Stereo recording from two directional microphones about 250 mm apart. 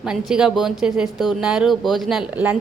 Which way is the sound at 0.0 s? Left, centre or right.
Centre.